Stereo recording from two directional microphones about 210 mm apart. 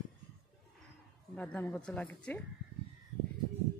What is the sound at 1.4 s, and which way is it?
Speech, 5° left (ahead or behind).